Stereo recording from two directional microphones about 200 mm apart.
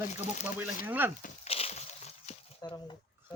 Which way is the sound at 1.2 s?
35° left (ahead or behind).